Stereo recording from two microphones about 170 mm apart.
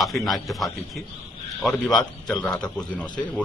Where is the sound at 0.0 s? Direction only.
Centre (ahead or behind).